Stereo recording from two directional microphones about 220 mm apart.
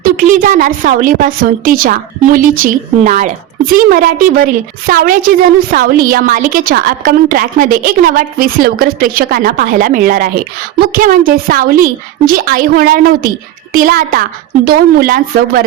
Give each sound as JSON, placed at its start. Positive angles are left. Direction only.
{"t": 0.0, "sound": "a woman's voice", "side_deg": -40}